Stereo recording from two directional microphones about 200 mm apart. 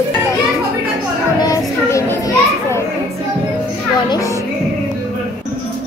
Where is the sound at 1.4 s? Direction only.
15° left (ahead or behind).